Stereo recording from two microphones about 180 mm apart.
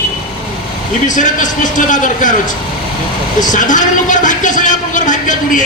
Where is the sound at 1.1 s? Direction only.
45° left (ahead or behind).